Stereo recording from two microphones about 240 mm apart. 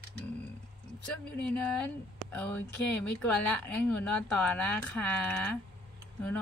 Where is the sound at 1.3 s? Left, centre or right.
Centre.